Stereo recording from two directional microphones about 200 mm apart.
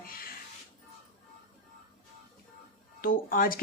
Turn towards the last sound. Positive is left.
turn(degrees=45)  # may be behind; listen again after turning